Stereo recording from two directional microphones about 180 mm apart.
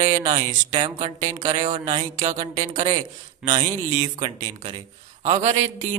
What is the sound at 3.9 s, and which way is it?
Speech, 40° right (ahead or behind).